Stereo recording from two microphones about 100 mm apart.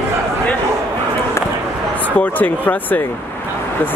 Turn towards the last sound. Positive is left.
turn(degrees=15)  # may be behind; listen again after turning